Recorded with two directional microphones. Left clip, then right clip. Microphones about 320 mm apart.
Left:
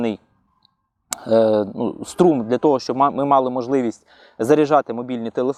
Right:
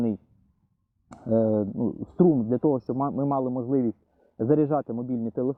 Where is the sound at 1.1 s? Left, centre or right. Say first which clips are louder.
Left 17 dB; centre.